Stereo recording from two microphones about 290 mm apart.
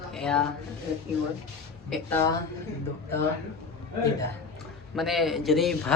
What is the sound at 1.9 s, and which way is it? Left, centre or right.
Speech, centre.